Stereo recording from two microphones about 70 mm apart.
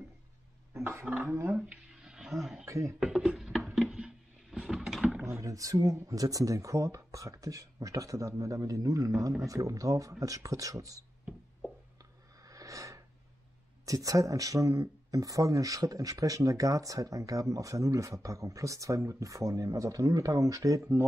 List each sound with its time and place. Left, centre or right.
0.7 s speech: right
2.0 s roaring cats: centre
2.3 s speech: centre
2.6 s speech: right
3.0 s a sound: centre
5.2 s speech: right
12.4 s a sound: right
13.8 s speech: right